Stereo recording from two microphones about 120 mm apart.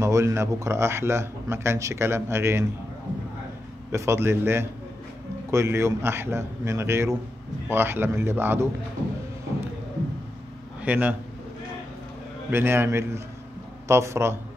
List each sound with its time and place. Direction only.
0.0 s speech: 25° right (ahead or behind)
3.9 s speech: 25° right (ahead or behind)
10.8 s a man's voice: 15° right (ahead or behind)
12.4 s speech: 20° right (ahead or behind)